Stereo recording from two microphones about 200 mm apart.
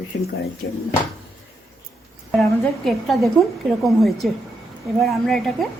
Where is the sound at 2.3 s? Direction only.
Centre (ahead or behind).